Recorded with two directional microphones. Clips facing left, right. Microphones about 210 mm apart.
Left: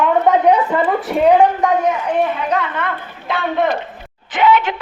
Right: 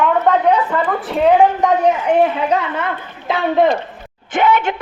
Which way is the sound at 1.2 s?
Centre (ahead or behind).